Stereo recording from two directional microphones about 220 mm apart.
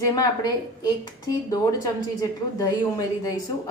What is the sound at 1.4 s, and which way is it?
Speech, 15° left (ahead or behind).